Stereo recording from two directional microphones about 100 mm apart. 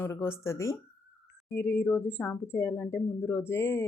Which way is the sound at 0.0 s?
25° left (ahead or behind).